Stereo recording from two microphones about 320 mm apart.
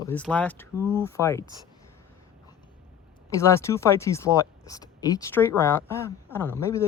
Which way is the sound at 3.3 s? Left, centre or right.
Centre.